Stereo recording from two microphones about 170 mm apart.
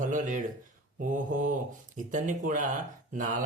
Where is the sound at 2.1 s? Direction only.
50° right (ahead or behind).